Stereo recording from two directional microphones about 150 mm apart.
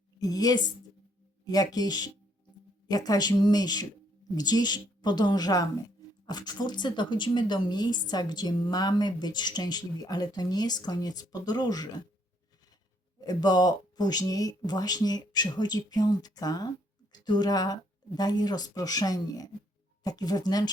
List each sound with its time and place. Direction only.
0.2 s speech: 25° left (ahead or behind)
13.2 s a woman's voice: 25° left (ahead or behind)